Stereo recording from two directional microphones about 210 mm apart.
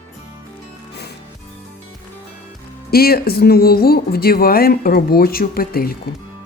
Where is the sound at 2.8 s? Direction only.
45° left (ahead or behind).